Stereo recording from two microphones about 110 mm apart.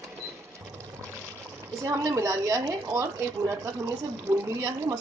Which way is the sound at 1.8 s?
30° right (ahead or behind).